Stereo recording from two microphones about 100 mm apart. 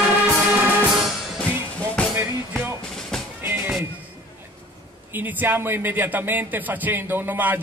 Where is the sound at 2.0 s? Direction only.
10° left (ahead or behind).